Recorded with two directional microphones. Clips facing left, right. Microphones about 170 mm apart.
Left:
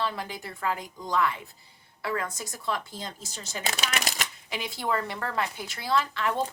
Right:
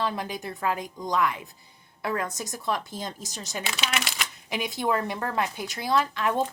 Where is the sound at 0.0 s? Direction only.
20° right (ahead or behind).